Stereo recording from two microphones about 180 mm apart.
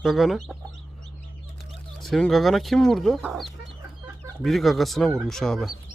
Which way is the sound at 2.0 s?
Centre (ahead or behind).